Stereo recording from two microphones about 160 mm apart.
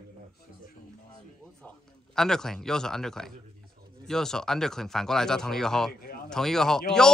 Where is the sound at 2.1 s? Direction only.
5° left (ahead or behind).